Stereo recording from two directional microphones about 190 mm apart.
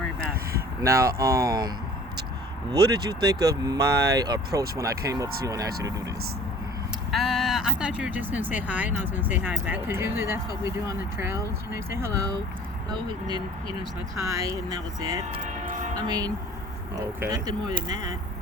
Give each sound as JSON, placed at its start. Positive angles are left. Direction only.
{"t": 0.8, "sound": "speech", "side_deg": -15}
{"t": 2.7, "sound": "speech", "side_deg": -20}
{"t": 7.1, "sound": "speech", "side_deg": 0}
{"t": 15.4, "sound": "train", "side_deg": -45}
{"t": 16.0, "sound": "speech", "side_deg": -20}